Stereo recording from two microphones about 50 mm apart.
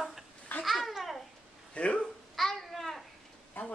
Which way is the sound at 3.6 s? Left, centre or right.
Left.